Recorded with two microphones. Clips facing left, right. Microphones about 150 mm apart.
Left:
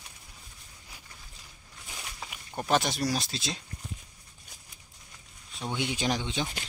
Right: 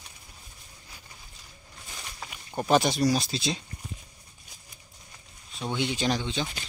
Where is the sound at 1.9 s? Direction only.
Centre (ahead or behind).